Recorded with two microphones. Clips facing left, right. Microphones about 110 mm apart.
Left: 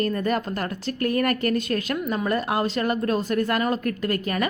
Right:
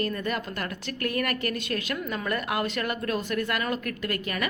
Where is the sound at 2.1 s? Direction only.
30° left (ahead or behind).